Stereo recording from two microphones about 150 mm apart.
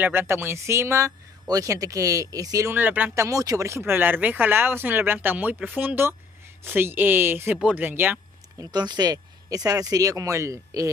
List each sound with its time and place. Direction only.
0.0 s speech: 15° right (ahead or behind)
8.7 s speech: 30° right (ahead or behind)